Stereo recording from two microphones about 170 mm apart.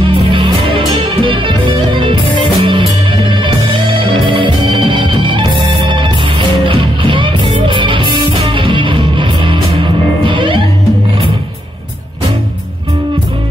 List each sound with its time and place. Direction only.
0.0 s music: 30° right (ahead or behind)